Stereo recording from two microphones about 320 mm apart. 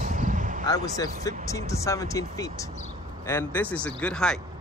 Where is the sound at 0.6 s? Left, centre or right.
Centre.